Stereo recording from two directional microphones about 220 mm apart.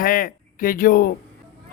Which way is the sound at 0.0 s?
40° left (ahead or behind).